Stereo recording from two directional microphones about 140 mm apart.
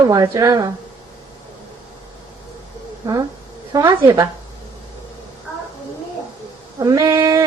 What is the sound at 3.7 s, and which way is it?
Speech, 25° right (ahead or behind).